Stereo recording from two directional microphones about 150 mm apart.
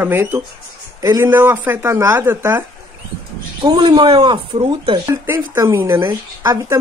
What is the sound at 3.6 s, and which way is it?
Speech, 30° right (ahead or behind).